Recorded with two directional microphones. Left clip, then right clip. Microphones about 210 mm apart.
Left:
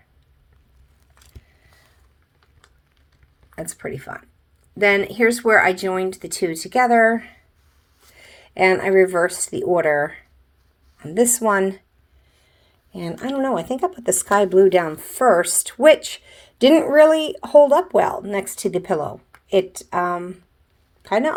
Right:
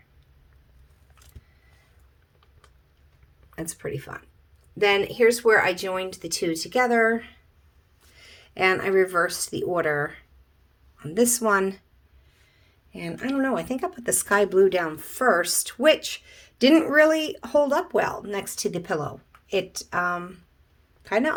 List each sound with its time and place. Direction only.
3.5 s speech: 15° left (ahead or behind)
13.1 s speech: 15° left (ahead or behind)